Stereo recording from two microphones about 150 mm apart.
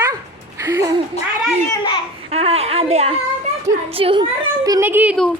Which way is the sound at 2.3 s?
40° right (ahead or behind).